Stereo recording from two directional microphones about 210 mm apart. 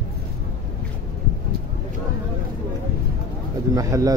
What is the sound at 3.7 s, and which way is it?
Speech, 15° right (ahead or behind).